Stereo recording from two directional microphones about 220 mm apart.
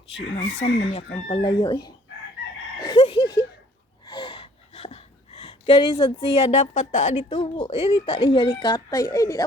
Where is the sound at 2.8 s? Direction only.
20° left (ahead or behind).